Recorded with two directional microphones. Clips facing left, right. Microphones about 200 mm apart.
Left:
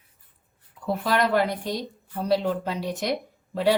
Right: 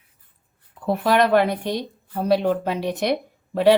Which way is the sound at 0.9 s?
65° right (ahead or behind).